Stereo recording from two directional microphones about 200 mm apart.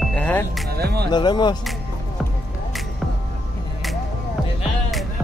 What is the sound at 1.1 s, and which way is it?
Speech, 20° left (ahead or behind).